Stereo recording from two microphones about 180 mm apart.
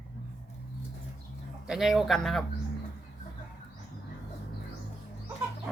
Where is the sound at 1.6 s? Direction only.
Centre (ahead or behind).